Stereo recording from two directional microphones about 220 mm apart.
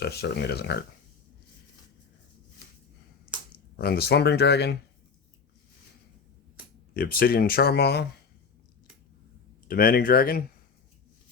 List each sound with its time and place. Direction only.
0.0 s speech: 50° left (ahead or behind)
3.8 s speech: 45° left (ahead or behind)
6.9 s speech: 45° left (ahead or behind)
9.6 s speech: 40° left (ahead or behind)